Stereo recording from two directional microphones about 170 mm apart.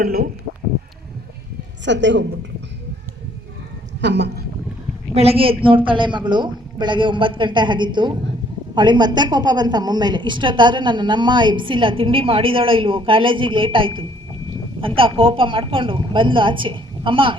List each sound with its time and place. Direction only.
0.0 s speech: 60° right (ahead or behind)
1.8 s a woman's voice: 90° right
4.0 s a woman's voice: 90° right
5.1 s a woman's voice: 35° right (ahead or behind)